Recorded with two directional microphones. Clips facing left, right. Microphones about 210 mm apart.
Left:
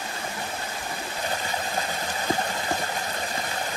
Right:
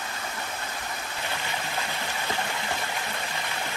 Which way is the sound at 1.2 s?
40° left (ahead or behind).